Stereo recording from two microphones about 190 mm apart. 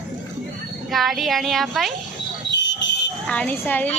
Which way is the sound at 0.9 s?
Centre (ahead or behind).